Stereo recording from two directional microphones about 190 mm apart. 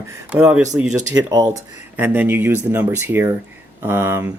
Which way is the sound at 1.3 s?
20° right (ahead or behind).